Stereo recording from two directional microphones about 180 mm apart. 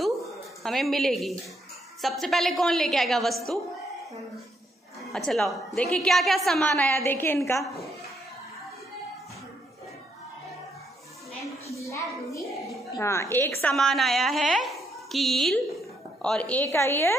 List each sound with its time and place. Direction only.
0.7 s a woman's voice: centre (ahead or behind)
5.1 s a woman's voice: centre (ahead or behind)
11.8 s a sound: 15° left (ahead or behind)
12.9 s a woman's voice: 15° left (ahead or behind)